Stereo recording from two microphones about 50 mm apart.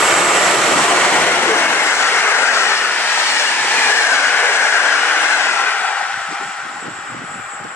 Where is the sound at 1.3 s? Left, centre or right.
Left.